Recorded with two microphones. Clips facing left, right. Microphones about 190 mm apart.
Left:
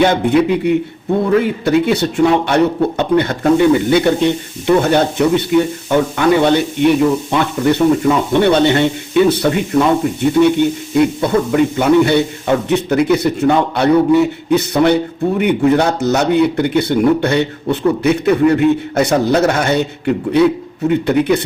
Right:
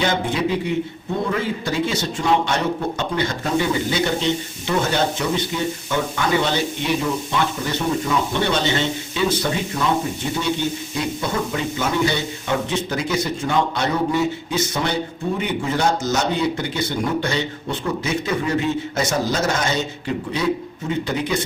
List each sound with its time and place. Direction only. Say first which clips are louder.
0.0 s speech: left 9 dB; 60° left (ahead or behind)